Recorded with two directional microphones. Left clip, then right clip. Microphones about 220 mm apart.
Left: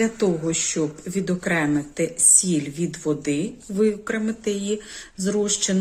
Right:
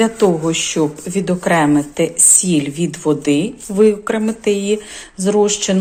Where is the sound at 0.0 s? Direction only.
10° left (ahead or behind).